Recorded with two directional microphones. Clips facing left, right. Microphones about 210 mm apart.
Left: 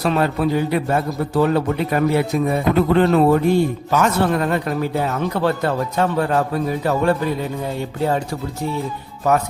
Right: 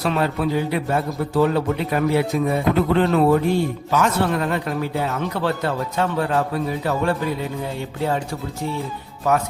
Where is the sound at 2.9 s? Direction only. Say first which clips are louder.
Left 2 dB; 45° left (ahead or behind).